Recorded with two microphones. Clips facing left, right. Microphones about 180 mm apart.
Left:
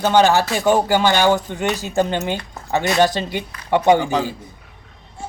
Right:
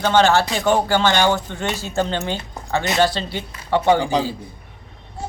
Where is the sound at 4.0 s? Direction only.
15° right (ahead or behind).